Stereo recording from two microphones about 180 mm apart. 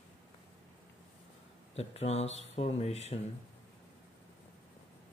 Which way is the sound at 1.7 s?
35° left (ahead or behind).